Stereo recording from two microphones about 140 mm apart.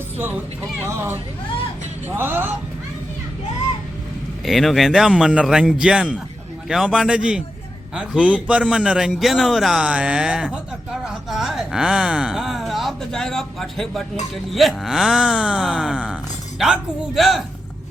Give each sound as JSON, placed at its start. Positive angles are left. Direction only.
{"t": 0.8, "sound": "speech", "side_deg": -15}
{"t": 4.4, "sound": "a man's voice", "side_deg": 0}